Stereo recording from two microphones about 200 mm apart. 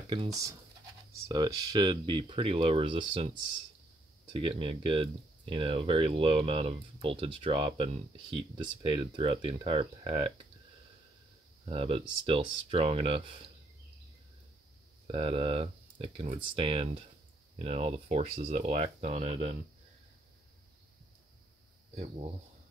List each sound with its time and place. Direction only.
0.1 s speech: 20° right (ahead or behind)
4.4 s speech: 25° right (ahead or behind)
11.6 s speech: 30° right (ahead or behind)
15.0 s speech: 25° right (ahead or behind)
21.9 s speech: 30° right (ahead or behind)